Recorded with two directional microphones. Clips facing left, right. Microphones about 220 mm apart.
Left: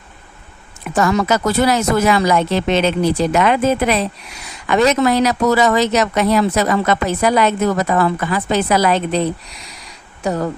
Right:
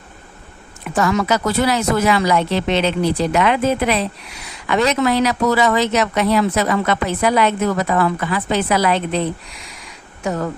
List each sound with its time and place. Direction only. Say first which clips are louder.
0.9 s speech: left 2 dB; 45° left (ahead or behind)
10.2 s speech: left 2 dB; 35° left (ahead or behind)